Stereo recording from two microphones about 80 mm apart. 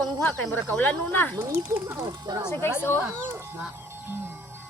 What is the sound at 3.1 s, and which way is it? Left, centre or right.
Speech, right.